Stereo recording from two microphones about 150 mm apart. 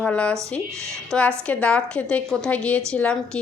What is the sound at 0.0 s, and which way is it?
A woman's voice, 10° left (ahead or behind).